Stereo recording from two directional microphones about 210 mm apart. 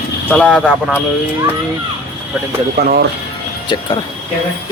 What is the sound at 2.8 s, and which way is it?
Speech, 45° right (ahead or behind).